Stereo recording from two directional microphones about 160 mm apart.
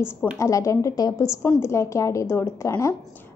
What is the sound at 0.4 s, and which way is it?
A woman's voice, 20° left (ahead or behind).